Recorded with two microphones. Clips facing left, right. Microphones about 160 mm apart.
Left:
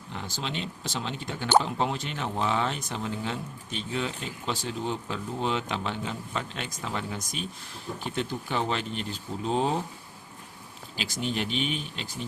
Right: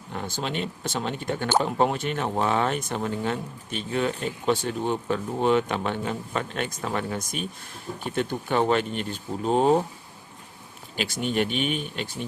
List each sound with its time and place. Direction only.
0.1 s speech: 55° right (ahead or behind)
10.9 s speech: 55° right (ahead or behind)